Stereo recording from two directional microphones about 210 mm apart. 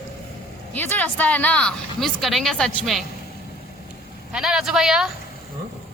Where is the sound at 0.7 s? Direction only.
10° left (ahead or behind).